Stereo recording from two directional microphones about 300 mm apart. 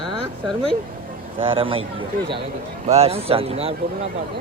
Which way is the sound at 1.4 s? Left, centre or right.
Centre.